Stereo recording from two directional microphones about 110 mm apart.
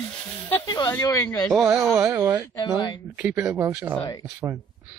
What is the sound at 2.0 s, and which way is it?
Speech, 25° right (ahead or behind).